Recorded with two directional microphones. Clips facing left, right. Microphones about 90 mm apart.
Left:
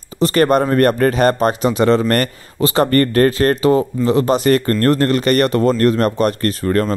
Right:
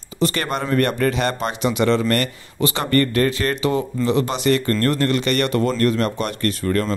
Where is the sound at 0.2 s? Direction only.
40° left (ahead or behind).